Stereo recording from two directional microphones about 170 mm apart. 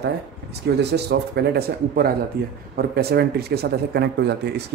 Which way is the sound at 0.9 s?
75° right (ahead or behind).